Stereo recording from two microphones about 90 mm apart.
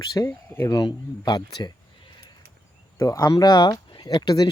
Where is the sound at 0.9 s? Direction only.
55° left (ahead or behind).